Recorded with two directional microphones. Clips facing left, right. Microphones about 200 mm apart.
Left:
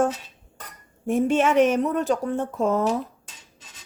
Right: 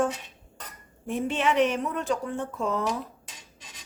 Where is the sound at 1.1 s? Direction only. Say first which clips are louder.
Left 6 dB; 45° left (ahead or behind).